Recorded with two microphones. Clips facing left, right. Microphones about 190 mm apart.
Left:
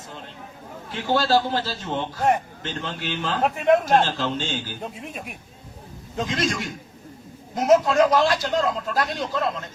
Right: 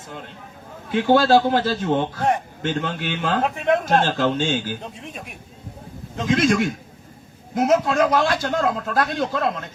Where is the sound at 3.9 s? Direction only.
55° right (ahead or behind).